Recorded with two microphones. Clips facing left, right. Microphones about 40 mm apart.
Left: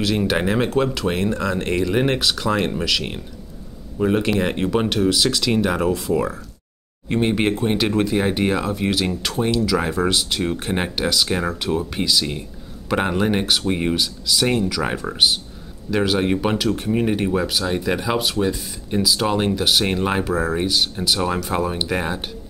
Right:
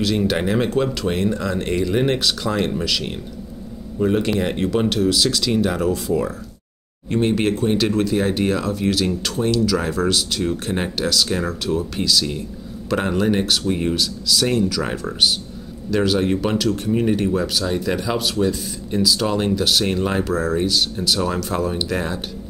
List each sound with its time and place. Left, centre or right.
0.0 s speech: centre
5.9 s speech: centre
7.1 s speech: centre